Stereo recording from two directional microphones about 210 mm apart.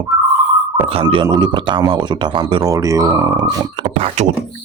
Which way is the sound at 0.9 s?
25° right (ahead or behind).